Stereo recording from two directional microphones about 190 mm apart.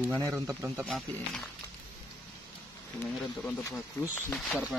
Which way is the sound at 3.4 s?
15° left (ahead or behind).